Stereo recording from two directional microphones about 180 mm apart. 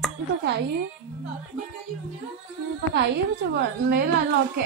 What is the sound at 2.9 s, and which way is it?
A woman's voice, 70° right (ahead or behind).